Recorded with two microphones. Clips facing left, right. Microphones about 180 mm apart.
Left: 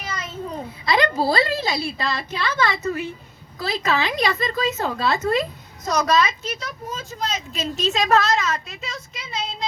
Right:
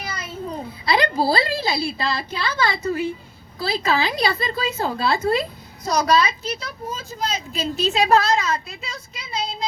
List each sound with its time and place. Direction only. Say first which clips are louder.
0.9 s a woman's voice: even; 35° right (ahead or behind)